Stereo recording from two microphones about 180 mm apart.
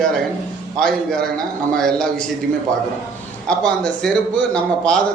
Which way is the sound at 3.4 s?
5° left (ahead or behind).